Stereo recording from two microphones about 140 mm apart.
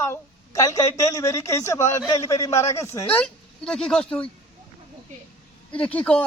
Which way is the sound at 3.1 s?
5° left (ahead or behind).